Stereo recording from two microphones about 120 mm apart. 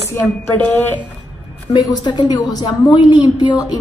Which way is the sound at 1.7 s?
30° left (ahead or behind).